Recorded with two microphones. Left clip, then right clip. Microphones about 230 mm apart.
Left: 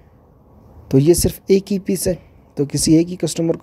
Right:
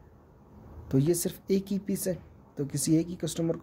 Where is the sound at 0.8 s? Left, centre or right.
Left.